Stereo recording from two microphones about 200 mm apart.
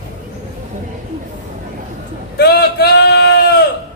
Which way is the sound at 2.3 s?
55° left (ahead or behind).